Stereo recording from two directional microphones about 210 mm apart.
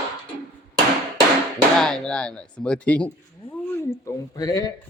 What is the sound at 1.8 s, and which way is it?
Speech, 5° left (ahead or behind).